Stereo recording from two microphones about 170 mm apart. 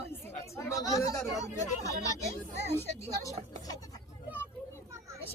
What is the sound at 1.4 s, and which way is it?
Speech, 20° left (ahead or behind).